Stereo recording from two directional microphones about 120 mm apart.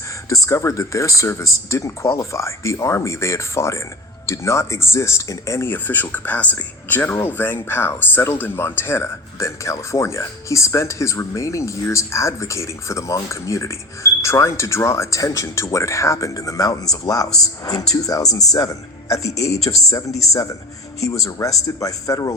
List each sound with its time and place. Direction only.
0.3 s a man's voice: 25° left (ahead or behind)